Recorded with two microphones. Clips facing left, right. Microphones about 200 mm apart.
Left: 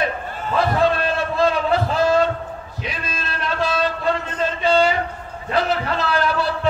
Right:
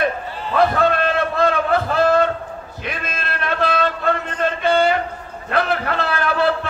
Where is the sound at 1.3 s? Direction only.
55° right (ahead or behind).